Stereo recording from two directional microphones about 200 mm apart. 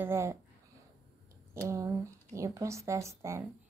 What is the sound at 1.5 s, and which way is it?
A woman's voice, 15° right (ahead or behind).